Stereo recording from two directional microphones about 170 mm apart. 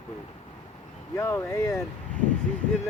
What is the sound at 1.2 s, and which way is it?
Speech, 15° left (ahead or behind).